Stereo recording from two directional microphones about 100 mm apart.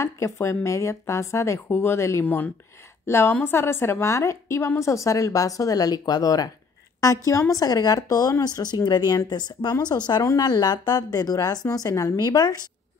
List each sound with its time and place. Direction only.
0.0 s speech: 30° left (ahead or behind)
2.2 s speech: 15° left (ahead or behind); by 12.5 s 40° left (ahead or behind)